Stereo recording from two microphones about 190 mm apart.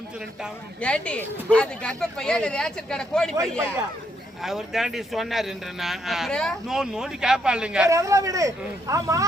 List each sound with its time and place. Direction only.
0.8 s speech: 5° left (ahead or behind)
4.4 s speech: centre (ahead or behind)
7.9 s speech: 15° right (ahead or behind)